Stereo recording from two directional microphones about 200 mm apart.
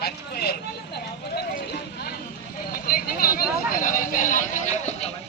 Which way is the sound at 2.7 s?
45° left (ahead or behind).